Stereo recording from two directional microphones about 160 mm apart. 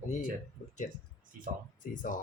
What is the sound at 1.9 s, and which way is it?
Speech, 55° left (ahead or behind).